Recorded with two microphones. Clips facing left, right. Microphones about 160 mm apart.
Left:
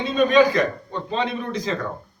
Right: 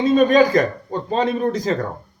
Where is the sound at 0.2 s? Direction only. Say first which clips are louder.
Left 1 dB; 45° right (ahead or behind).